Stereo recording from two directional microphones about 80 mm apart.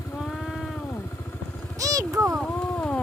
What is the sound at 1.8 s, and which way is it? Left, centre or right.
Vehicle, right.